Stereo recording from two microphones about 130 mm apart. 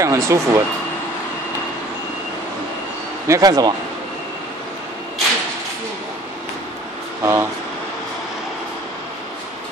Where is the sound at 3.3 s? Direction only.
30° right (ahead or behind).